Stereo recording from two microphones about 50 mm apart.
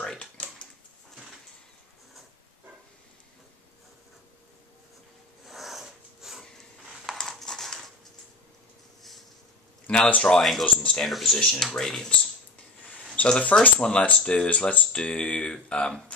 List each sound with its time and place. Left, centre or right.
0.2 s typing: left
5.4 s a sound: centre
7.1 s a sound: centre
10.0 s speech: left
10.3 s speech: centre
10.6 s speech: centre
11.1 s speech: centre
11.3 s speech: centre
13.1 s speech: left